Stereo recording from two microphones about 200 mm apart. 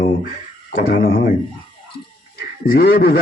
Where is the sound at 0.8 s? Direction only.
45° left (ahead or behind).